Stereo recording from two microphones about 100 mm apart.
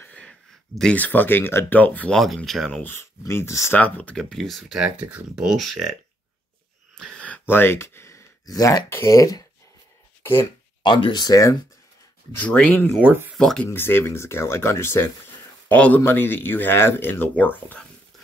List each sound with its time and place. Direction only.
0.0 s speech: 10° left (ahead or behind)
2.1 s speech: centre (ahead or behind)
2.8 s speech: 25° left (ahead or behind)
3.7 s speech: 15° left (ahead or behind); by 5.9 s centre (ahead or behind)
7.0 s speech: 10° left (ahead or behind); by 9.4 s 35° left (ahead or behind)
10.8 s speech: 55° left (ahead or behind); by 11.5 s 40° left (ahead or behind)
12.4 s speech: 15° left (ahead or behind)
13.0 s speech: 20° right (ahead or behind)
13.4 s speech: 10° left (ahead or behind)
13.7 s speech: 25° left (ahead or behind)
15.7 s speech: 15° left (ahead or behind)